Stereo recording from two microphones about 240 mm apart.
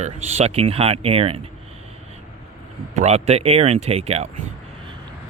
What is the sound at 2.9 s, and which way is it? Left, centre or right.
Speech, right.